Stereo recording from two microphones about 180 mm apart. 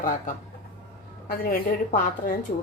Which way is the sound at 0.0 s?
45° left (ahead or behind).